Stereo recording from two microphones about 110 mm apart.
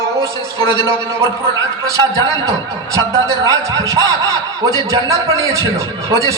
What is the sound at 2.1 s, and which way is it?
A man's voice, 30° right (ahead or behind).